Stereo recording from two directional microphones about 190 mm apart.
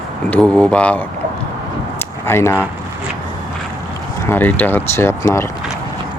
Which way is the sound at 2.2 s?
15° left (ahead or behind).